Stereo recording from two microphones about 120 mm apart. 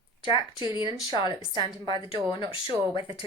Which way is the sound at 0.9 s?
40° left (ahead or behind).